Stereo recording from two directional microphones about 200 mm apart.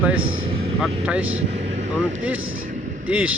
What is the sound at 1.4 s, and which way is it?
Vehicle, 35° right (ahead or behind).